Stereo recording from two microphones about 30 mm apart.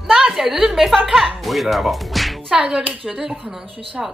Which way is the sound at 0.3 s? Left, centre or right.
Centre.